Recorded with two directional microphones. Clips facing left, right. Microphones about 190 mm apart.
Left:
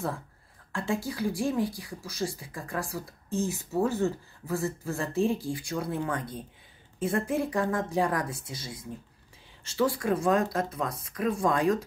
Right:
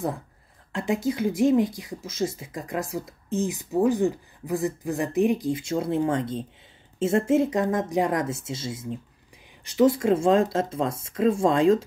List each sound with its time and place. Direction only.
0.7 s speech: 20° right (ahead or behind)